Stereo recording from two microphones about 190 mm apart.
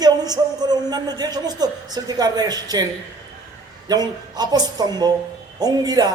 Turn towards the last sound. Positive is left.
turn(degrees=-20)  # may be behind; listen again after turning